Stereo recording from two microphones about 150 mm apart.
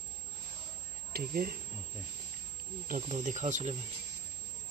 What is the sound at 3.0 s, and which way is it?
Speech, 50° right (ahead or behind).